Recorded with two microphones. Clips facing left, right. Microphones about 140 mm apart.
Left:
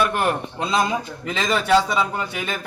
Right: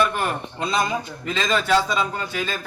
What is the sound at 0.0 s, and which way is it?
A man's voice, 10° left (ahead or behind).